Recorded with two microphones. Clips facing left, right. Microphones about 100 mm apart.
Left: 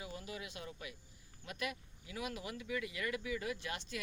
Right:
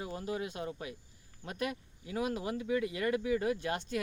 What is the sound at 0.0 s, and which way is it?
Speech, 40° right (ahead or behind).